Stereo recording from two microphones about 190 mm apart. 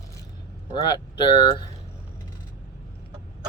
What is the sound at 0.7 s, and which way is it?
Speech, 25° left (ahead or behind).